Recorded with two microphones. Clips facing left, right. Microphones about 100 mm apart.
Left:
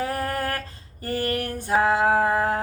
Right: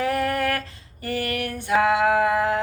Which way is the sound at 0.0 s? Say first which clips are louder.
Right 4 dB; 35° left (ahead or behind).